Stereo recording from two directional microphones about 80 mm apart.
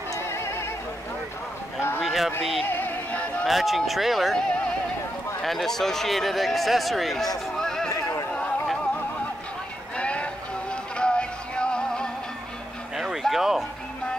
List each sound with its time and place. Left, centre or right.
0.1 s music: left
2.0 s a sound: centre
2.7 s music: left
3.4 s speech: centre
7.5 s a sound: centre
7.9 s music: left
8.3 s music: centre
9.9 s music: centre
12.9 s a sound: centre